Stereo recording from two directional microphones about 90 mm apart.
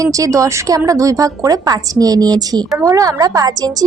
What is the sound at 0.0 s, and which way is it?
A woman's voice, 40° right (ahead or behind).